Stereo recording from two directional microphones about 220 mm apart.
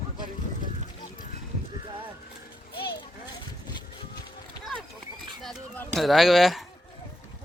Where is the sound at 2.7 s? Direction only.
45° left (ahead or behind).